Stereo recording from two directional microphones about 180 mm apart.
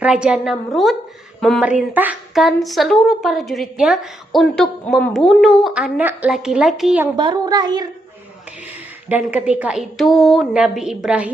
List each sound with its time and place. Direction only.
0.0 s speech: 5° right (ahead or behind)
7.2 s speech: 25° right (ahead or behind)
9.0 s speech: 10° right (ahead or behind)